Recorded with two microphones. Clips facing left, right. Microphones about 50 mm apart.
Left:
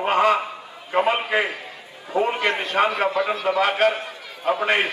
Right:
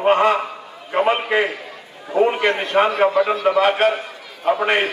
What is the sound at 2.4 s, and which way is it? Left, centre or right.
A man's voice, right.